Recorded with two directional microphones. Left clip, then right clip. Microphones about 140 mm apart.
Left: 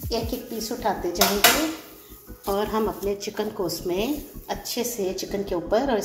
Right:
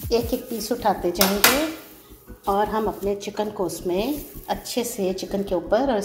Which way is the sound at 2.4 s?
5° right (ahead or behind).